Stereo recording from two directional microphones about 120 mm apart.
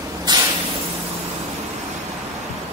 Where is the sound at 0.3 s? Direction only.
35° right (ahead or behind).